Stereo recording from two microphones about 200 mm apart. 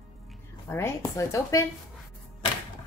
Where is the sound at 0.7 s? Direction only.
15° left (ahead or behind).